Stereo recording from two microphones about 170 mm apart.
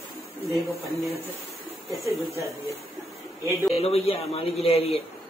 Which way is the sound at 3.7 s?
35° left (ahead or behind).